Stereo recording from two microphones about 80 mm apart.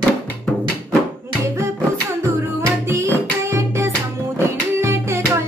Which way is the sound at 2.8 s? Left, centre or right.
Right.